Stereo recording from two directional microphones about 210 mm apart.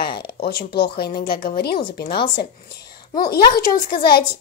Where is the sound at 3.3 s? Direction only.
45° left (ahead or behind).